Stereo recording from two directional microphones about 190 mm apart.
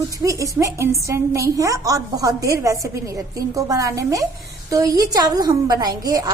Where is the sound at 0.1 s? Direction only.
15° right (ahead or behind).